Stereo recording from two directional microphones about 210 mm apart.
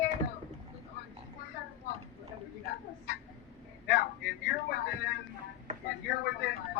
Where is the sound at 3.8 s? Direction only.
50° left (ahead or behind).